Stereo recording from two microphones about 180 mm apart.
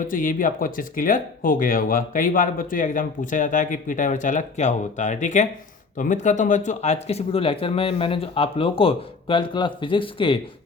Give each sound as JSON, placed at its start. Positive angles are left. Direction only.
{"t": 0.1, "sound": "speech", "side_deg": 50}